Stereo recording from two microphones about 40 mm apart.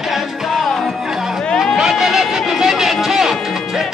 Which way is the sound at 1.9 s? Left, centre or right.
Centre.